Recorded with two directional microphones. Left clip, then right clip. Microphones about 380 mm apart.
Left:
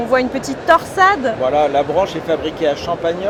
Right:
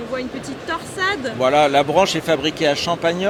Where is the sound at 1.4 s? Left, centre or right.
Right.